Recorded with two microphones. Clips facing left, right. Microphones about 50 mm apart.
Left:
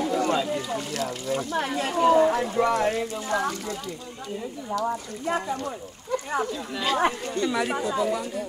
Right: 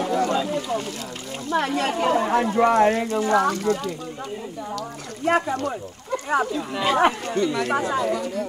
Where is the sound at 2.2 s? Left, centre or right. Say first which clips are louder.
Right 2 dB; right.